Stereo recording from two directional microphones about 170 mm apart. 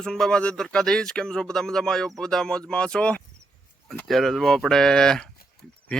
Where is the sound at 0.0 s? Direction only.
5° left (ahead or behind).